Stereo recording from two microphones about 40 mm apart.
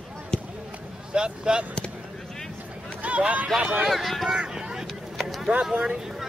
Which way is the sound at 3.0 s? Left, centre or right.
Right.